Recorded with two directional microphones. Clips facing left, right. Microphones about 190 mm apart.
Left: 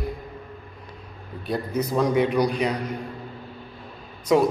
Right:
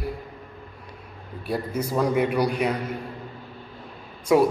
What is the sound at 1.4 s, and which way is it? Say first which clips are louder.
A man's voice: left 1 dB; 5° right (ahead or behind).